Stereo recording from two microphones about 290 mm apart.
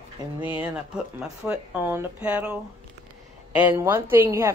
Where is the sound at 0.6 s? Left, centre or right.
Centre.